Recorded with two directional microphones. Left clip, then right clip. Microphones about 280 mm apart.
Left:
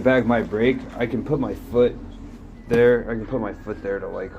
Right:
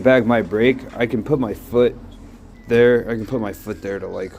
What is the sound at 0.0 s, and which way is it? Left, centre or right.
Speech, right.